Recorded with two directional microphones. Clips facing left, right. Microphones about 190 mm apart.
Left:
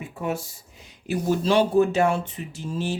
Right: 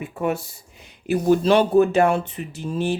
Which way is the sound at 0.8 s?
60° right (ahead or behind).